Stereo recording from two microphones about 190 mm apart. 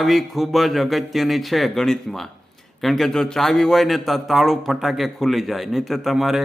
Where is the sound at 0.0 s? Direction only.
Centre (ahead or behind).